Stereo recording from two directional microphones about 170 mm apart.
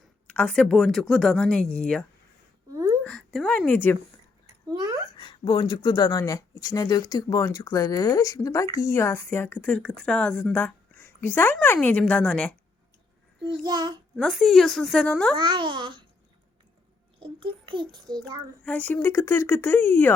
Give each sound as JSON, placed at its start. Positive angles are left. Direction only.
{"t": 0.3, "sound": "speech", "side_deg": 5}
{"t": 2.7, "sound": "a sound", "side_deg": -15}
{"t": 3.0, "sound": "speech", "side_deg": 5}
{"t": 4.4, "sound": "a sound", "side_deg": -20}
{"t": 5.1, "sound": "speech", "side_deg": 30}
{"t": 13.7, "sound": "a child's voice", "side_deg": -25}
{"t": 14.2, "sound": "speech", "side_deg": 0}
{"t": 15.4, "sound": "a child's voice", "side_deg": -30}
{"t": 17.2, "sound": "a child's voice", "side_deg": -30}
{"t": 18.6, "sound": "speech", "side_deg": 10}